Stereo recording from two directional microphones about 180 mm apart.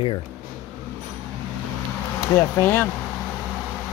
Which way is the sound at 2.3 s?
10° left (ahead or behind).